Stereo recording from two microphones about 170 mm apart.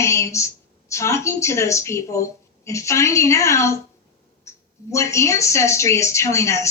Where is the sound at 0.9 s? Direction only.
15° left (ahead or behind).